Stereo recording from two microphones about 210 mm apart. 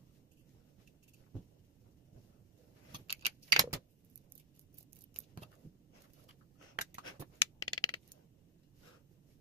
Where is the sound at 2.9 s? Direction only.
20° right (ahead or behind).